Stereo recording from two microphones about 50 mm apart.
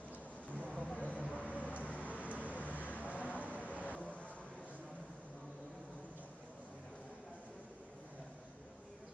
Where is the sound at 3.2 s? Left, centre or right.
Left.